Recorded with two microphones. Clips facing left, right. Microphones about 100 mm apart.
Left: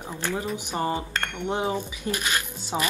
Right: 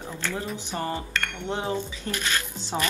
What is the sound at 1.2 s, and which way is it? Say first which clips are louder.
Speech: left 3 dB; 20° left (ahead or behind).